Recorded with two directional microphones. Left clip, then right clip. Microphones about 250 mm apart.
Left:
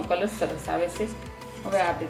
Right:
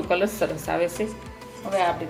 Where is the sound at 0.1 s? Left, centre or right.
Right.